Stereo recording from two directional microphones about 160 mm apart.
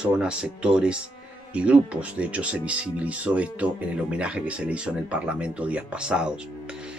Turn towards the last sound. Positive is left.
turn(degrees=-5)  # may be behind; listen again after turning